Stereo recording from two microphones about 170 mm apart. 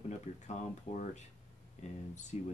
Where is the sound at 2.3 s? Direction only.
40° left (ahead or behind).